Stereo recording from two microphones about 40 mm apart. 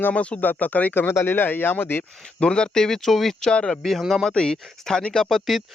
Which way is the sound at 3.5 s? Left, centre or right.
Left.